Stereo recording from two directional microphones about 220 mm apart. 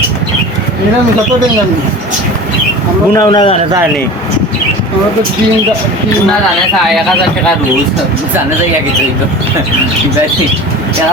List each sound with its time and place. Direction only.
3.2 s a man's voice: 15° left (ahead or behind)